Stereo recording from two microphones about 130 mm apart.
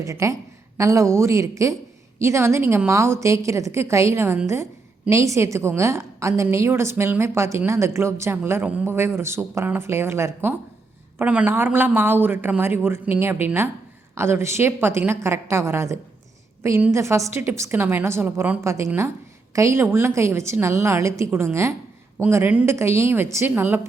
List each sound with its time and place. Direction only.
0.0 s a woman's voice: 25° right (ahead or behind)